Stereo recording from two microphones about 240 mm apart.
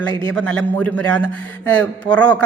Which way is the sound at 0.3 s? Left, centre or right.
Centre.